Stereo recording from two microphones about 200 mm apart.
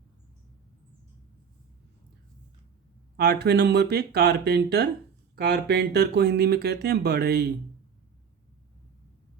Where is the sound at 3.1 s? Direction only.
55° right (ahead or behind).